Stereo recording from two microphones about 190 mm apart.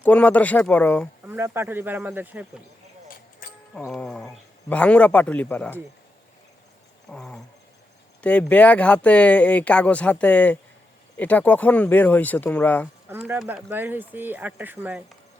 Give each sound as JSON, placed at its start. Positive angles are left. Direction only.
{"t": 0.0, "sound": "speech", "side_deg": 10}
{"t": 1.3, "sound": "speech", "side_deg": -10}
{"t": 3.4, "sound": "music", "side_deg": 45}
{"t": 3.8, "sound": "a sound", "side_deg": 5}
{"t": 4.7, "sound": "speech", "side_deg": 5}
{"t": 7.1, "sound": "a sound", "side_deg": 5}
{"t": 8.2, "sound": "speech", "side_deg": 5}
{"t": 13.1, "sound": "speech", "side_deg": -10}